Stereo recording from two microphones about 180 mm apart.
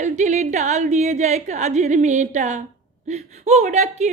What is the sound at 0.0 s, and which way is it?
Speech, 40° right (ahead or behind).